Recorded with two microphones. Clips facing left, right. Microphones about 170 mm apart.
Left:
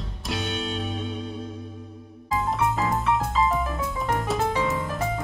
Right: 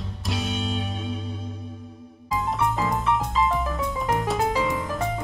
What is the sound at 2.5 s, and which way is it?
Music, 5° left (ahead or behind).